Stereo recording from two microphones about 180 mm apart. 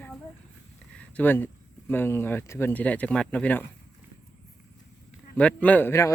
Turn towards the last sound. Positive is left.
turn(degrees=15)  # may be behind; listen again after turning